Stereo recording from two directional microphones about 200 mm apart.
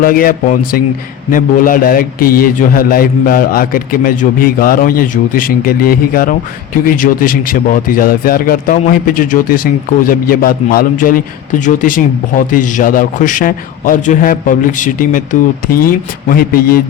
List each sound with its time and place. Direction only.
0.0 s speech: 45° left (ahead or behind)